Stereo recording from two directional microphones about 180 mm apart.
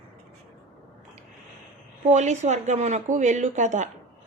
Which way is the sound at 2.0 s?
40° right (ahead or behind).